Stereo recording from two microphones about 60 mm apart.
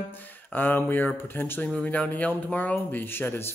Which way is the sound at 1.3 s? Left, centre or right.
Left.